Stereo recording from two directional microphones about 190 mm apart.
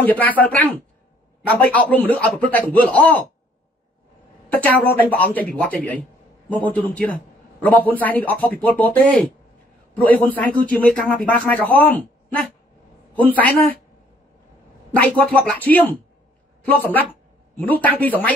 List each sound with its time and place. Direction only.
0.0 s a man's voice: 10° left (ahead or behind)
4.5 s a man's voice: 10° left (ahead or behind)
15.0 s a man's voice: 5° left (ahead or behind)